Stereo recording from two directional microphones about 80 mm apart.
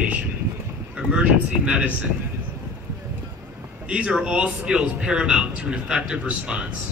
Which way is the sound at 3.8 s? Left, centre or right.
Centre.